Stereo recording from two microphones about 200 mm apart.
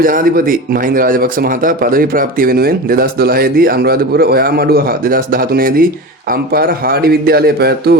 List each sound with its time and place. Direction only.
0.0 s speech: 45° right (ahead or behind)